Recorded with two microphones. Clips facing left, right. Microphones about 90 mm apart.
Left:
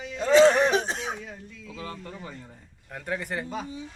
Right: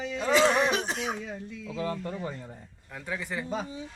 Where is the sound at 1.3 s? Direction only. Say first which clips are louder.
Right 4 dB; 20° right (ahead or behind).